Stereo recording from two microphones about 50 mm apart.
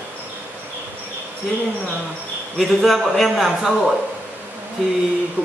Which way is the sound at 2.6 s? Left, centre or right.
Centre.